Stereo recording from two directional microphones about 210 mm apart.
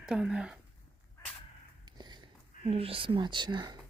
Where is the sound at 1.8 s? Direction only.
20° right (ahead or behind).